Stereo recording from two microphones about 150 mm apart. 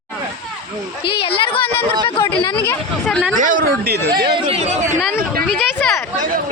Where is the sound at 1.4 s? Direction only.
35° left (ahead or behind).